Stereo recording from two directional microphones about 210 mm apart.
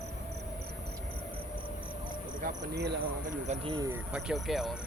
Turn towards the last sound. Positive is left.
turn(degrees=0)  # may be behind; listen again after turning